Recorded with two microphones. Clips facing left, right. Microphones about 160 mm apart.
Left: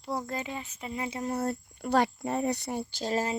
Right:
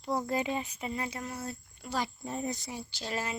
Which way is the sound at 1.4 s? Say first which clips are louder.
Left 9 dB; 60° left (ahead or behind).